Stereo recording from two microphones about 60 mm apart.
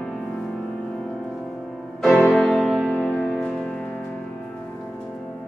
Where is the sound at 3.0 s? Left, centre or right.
Centre.